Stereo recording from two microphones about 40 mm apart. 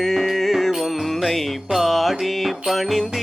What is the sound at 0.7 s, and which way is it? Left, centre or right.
Music, centre.